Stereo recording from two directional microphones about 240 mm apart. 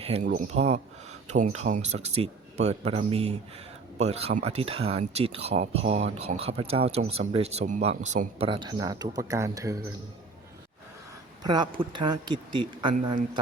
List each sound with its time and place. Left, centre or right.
0.0 s speech: right
11.4 s speech: centre